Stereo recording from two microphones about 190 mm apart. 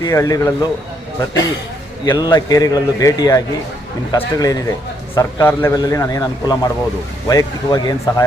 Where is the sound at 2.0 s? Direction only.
20° left (ahead or behind).